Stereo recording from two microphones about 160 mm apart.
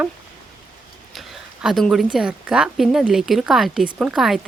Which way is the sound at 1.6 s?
Centre (ahead or behind).